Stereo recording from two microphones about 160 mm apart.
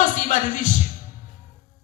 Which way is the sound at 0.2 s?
50° left (ahead or behind).